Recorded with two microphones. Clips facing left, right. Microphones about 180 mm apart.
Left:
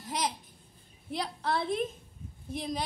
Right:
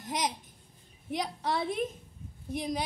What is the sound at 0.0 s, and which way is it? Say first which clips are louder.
Babbling: right 1 dB; 15° right (ahead or behind).